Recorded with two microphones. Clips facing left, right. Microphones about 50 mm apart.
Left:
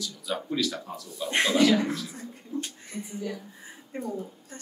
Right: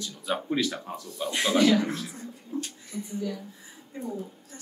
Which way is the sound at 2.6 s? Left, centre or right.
Left.